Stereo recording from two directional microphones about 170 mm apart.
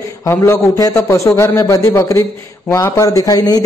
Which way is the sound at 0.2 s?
20° left (ahead or behind).